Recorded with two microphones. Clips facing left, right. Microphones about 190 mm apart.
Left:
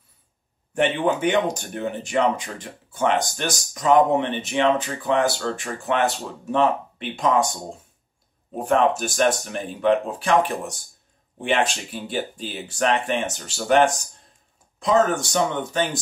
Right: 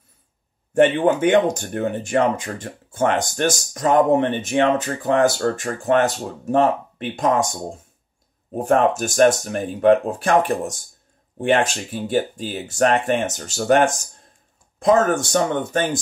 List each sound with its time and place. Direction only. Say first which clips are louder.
0.7 s speech: right 5 dB; 50° right (ahead or behind)
8.5 s speech: right 2 dB; 45° right (ahead or behind)